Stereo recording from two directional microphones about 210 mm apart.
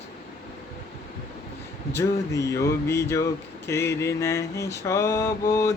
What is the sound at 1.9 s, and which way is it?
Speech, 15° left (ahead or behind).